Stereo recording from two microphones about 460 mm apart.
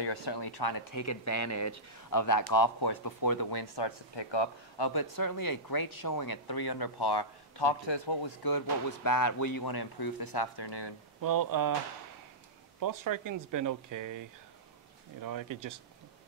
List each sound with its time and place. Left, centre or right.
0.0 s speech: left
11.1 s speech: right
12.8 s speech: right
15.2 s speech: right